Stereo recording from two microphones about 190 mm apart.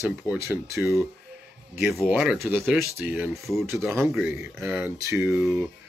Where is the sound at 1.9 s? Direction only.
5° right (ahead or behind).